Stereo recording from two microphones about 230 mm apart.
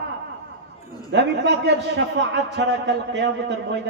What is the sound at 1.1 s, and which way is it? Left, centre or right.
A man's voice, right.